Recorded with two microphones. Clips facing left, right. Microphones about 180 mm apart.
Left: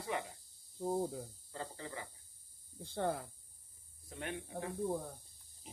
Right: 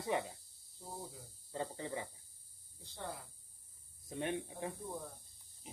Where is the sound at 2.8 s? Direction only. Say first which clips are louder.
Left 10 dB; 55° left (ahead or behind).